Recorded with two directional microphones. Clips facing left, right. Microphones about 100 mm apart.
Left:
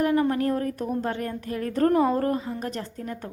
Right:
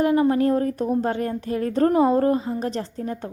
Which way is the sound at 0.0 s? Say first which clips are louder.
Right 4 dB; 25° right (ahead or behind).